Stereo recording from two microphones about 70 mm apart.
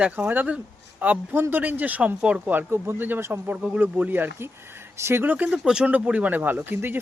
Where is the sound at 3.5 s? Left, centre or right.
Right.